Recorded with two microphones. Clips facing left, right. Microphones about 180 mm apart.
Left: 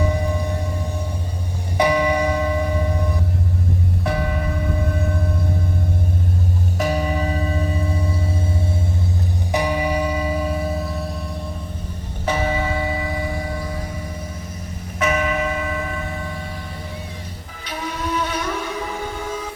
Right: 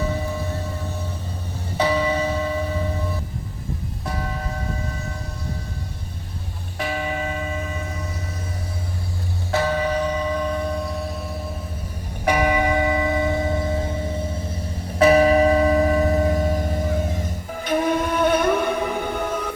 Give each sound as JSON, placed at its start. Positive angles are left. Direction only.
{"t": 0.0, "sound": "music", "side_deg": 15}
{"t": 1.8, "sound": "a sound", "side_deg": 15}
{"t": 4.0, "sound": "music", "side_deg": 65}
{"t": 6.7, "sound": "church bell", "side_deg": 40}
{"t": 9.5, "sound": "church bell", "side_deg": 15}
{"t": 12.2, "sound": "church bell", "side_deg": -15}
{"t": 14.9, "sound": "a sound", "side_deg": -35}
{"t": 17.7, "sound": "music", "side_deg": -50}